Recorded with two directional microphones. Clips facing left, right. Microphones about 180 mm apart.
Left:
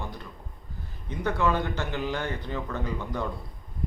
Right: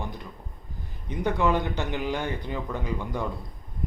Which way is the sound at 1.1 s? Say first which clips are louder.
Right 2 dB; 15° right (ahead or behind).